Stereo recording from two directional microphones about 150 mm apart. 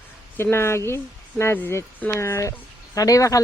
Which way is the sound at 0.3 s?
15° left (ahead or behind).